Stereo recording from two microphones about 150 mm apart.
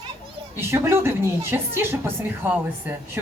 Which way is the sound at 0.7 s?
15° right (ahead or behind).